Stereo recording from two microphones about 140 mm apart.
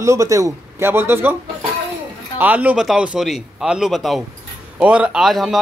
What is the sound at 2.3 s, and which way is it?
Speech, 10° right (ahead or behind).